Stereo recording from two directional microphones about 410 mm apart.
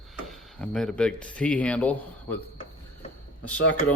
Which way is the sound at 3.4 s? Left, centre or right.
Centre.